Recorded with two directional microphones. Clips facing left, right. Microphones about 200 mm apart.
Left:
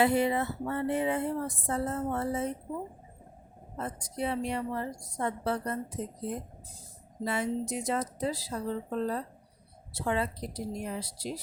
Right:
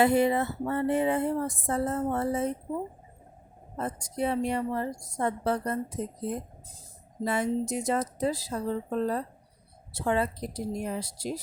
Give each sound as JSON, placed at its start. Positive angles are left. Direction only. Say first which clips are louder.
{"t": 0.0, "sound": "speech", "louder": "right 3 dB", "side_deg": -45}
{"t": 3.8, "sound": "speech", "louder": "right 4 dB", "side_deg": -45}
{"t": 7.3, "sound": "speech", "louder": "right 3 dB", "side_deg": -45}